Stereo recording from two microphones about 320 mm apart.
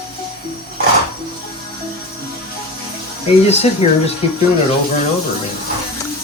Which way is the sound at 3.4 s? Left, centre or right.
Centre.